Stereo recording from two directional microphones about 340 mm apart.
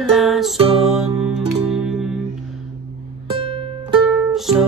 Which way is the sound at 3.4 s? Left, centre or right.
Centre.